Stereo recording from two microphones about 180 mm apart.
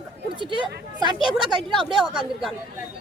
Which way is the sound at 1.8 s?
Centre (ahead or behind).